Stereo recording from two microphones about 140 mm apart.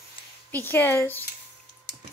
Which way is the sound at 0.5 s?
15° left (ahead or behind).